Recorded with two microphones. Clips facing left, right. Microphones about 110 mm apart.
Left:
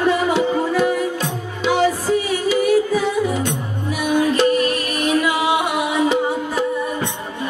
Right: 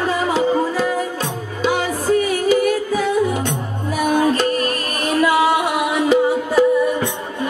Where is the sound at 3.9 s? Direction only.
40° right (ahead or behind).